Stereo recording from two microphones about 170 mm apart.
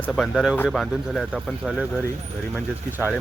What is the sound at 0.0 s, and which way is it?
Speech, centre (ahead or behind).